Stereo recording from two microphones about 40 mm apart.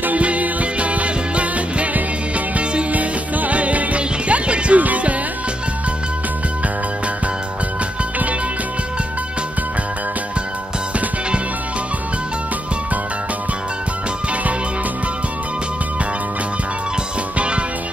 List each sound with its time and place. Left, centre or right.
0.0 s music: right